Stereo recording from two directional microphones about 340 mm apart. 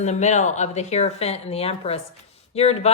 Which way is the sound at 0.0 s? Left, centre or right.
Centre.